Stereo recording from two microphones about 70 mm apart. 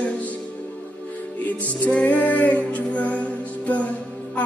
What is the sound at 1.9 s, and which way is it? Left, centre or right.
Female singing, left.